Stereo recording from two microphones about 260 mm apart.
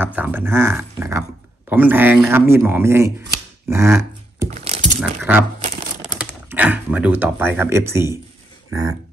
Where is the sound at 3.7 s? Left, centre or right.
Centre.